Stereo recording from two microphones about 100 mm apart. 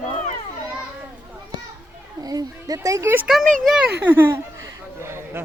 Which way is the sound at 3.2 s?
5° right (ahead or behind).